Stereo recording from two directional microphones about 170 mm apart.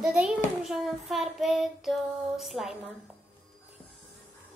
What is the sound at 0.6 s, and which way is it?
Child singing, centre (ahead or behind).